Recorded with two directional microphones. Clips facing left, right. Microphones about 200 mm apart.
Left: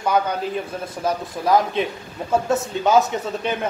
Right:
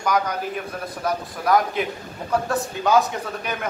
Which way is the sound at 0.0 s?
25° left (ahead or behind).